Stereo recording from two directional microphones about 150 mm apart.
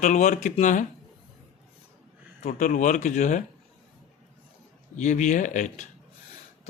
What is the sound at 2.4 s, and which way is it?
Speech, 55° left (ahead or behind).